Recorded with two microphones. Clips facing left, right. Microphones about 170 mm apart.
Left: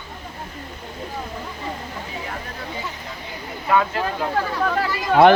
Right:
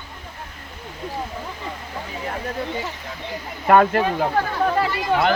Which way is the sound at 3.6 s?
55° right (ahead or behind).